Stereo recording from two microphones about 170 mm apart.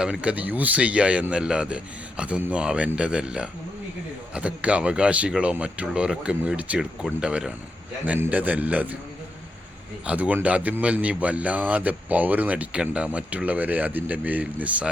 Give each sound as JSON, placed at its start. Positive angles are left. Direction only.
{"t": 0.0, "sound": "a man's voice", "side_deg": -5}
{"t": 10.1, "sound": "a man's voice", "side_deg": -10}